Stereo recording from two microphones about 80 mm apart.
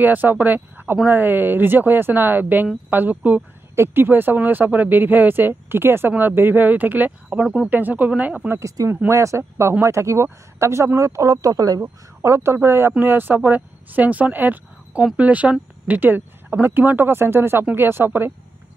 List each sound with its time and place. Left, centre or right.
0.0 s speech: right
7.4 s speech: centre
7.7 s speech: right
8.5 s speech: right
11.8 s speech: right